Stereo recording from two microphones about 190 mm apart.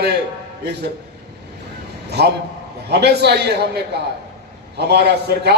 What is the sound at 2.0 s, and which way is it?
A man's voice, 60° right (ahead or behind).